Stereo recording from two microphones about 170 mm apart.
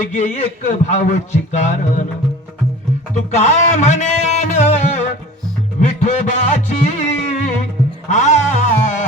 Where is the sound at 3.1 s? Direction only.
40° left (ahead or behind).